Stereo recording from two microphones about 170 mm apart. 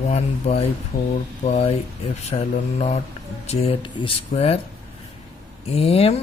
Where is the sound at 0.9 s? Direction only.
55° left (ahead or behind).